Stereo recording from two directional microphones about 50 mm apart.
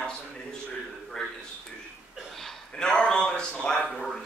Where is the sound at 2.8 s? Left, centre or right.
Centre.